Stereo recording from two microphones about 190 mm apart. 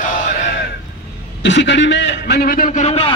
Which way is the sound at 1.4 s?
70° left (ahead or behind).